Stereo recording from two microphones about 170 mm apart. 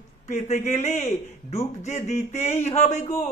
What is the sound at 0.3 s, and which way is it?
Speech, 40° left (ahead or behind).